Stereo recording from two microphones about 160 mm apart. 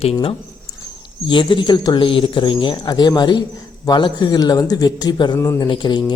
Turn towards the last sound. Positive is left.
turn(degrees=30)  # may be behind; listen again after turning